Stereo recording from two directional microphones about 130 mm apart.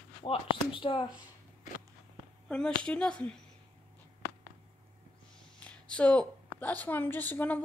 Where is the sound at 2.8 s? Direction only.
5° left (ahead or behind).